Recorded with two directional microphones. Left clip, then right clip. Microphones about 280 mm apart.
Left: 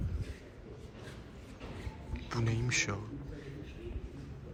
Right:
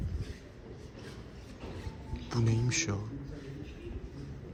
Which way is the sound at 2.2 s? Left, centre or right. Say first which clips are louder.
Right 2 dB; centre.